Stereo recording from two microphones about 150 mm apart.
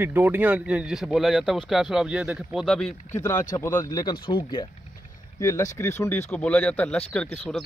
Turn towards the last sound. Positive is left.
turn(degrees=5)  # may be behind; listen again after turning